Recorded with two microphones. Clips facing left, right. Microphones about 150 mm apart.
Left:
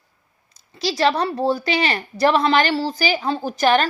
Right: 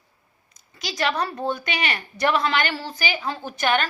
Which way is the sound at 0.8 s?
30° left (ahead or behind).